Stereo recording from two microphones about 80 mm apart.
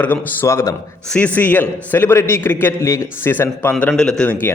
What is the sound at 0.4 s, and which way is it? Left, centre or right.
Speech, left.